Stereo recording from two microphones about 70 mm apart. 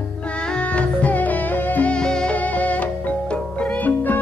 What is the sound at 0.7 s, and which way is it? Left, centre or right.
Music, left.